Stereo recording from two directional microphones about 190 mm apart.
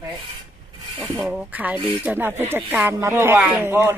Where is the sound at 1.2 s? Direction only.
5° right (ahead or behind).